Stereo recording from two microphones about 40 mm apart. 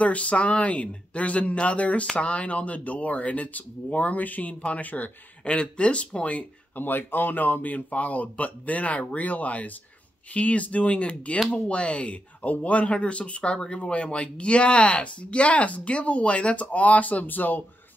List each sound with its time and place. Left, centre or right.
0.0 s speech: left
5.4 s speech: left
6.7 s speech: left